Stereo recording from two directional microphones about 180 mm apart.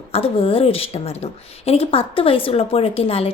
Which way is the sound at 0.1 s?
30° left (ahead or behind).